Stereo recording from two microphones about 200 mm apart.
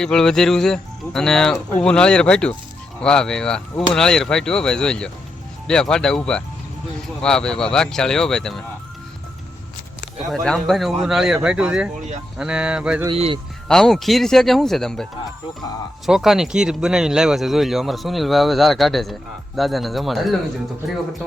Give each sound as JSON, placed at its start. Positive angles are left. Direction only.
{"t": 0.0, "sound": "speech", "side_deg": 5}
{"t": 10.3, "sound": "speech", "side_deg": 0}
{"t": 13.1, "sound": "a man's voice", "side_deg": -25}
{"t": 13.7, "sound": "speech", "side_deg": 0}
{"t": 16.0, "sound": "speech", "side_deg": 0}